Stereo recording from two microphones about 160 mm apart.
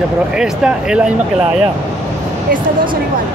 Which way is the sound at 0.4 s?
5° right (ahead or behind).